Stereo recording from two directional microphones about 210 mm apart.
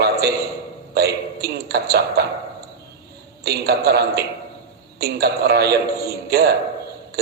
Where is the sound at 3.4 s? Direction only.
50° right (ahead or behind).